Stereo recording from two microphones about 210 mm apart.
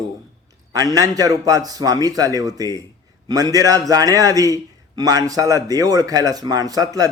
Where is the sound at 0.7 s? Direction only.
15° right (ahead or behind).